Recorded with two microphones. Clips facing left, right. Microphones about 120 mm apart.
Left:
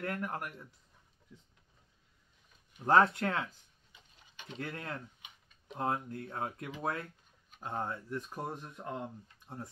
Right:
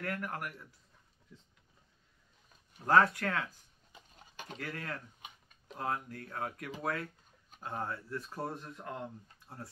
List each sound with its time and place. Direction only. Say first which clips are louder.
0.0 s speech: left 1 dB; 20° left (ahead or behind)
2.9 s speech: left 1 dB; 25° left (ahead or behind)
3.9 s a sound: right 6 dB; 45° right (ahead or behind)
4.6 s speech: left 1 dB; 20° left (ahead or behind)